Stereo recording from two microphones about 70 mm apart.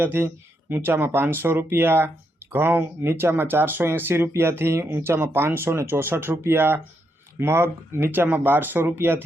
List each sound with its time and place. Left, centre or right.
0.0 s speech: right